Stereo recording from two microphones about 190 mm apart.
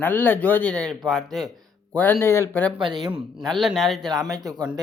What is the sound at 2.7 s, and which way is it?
Speech, 25° right (ahead or behind).